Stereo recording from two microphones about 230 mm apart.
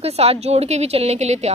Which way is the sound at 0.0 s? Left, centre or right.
Right.